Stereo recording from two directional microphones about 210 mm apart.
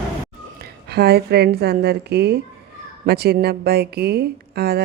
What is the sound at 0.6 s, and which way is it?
A woman's voice, 50° right (ahead or behind).